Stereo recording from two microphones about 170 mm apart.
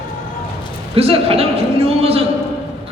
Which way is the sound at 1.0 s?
35° right (ahead or behind).